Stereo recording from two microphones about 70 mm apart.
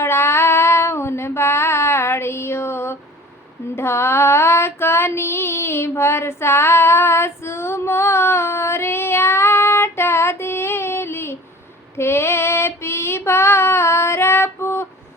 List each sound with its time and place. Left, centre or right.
0.0 s child singing: left
3.8 s female singing: left